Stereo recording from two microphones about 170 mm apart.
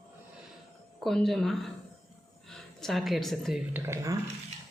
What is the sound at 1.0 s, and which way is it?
A woman's voice, centre (ahead or behind).